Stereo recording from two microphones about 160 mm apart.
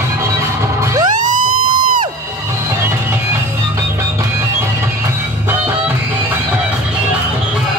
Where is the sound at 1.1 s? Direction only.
55° right (ahead or behind).